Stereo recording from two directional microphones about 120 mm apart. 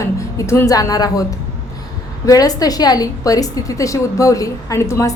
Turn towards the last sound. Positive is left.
turn(degrees=25)  # may be behind; listen again after turning